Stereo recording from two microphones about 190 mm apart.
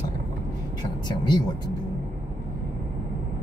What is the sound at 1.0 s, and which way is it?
Speech, 25° left (ahead or behind).